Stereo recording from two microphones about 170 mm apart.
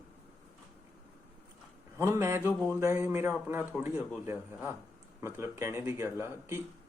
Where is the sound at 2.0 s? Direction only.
15° right (ahead or behind).